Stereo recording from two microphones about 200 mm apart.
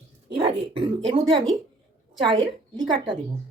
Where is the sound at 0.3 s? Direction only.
25° right (ahead or behind).